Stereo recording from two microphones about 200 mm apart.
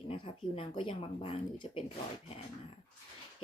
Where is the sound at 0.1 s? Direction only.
25° left (ahead or behind).